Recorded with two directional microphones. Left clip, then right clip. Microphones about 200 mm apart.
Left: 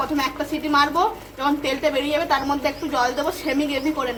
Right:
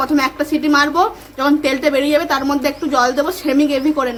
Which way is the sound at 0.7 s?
60° right (ahead or behind).